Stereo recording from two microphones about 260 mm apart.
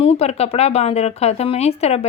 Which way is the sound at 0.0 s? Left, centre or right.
Left.